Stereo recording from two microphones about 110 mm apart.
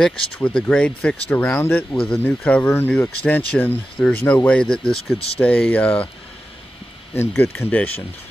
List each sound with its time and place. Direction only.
0.0 s speech: 5° left (ahead or behind)
7.2 s speech: 20° left (ahead or behind)